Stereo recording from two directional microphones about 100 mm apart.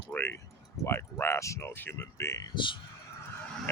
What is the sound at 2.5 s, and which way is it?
Speech, 55° left (ahead or behind).